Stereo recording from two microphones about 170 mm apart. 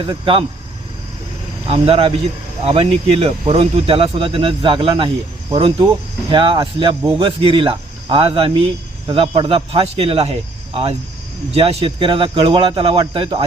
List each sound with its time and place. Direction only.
0.0 s speech: 30° right (ahead or behind)
1.6 s speech: 35° right (ahead or behind)
11.5 s speech: 35° right (ahead or behind)